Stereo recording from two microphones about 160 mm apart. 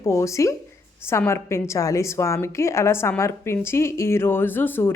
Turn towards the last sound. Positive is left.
turn(degrees=15)  # may be behind; listen again after turning